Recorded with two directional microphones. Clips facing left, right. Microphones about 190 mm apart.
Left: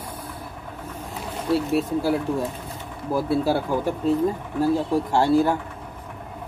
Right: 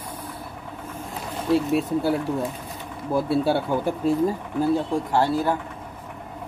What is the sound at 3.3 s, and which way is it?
Speech, centre (ahead or behind).